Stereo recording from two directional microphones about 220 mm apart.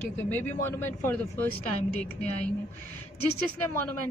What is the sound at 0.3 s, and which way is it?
Speech, 10° left (ahead or behind).